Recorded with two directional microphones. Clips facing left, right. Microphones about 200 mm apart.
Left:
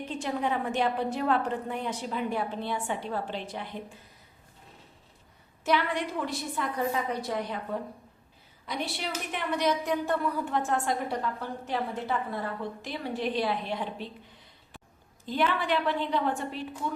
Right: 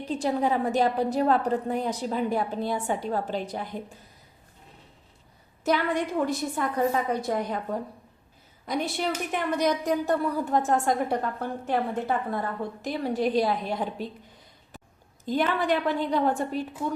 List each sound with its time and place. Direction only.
0.0 s a woman's voice: 35° right (ahead or behind)
5.6 s a woman's voice: 45° right (ahead or behind)
8.6 s a woman's voice: 45° right (ahead or behind)
15.3 s a woman's voice: 45° right (ahead or behind)